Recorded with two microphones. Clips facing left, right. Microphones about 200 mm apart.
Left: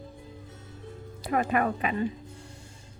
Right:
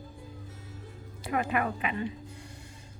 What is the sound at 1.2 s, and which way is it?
Speech, 40° left (ahead or behind).